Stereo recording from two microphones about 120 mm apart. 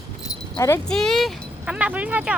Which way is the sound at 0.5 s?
25° left (ahead or behind).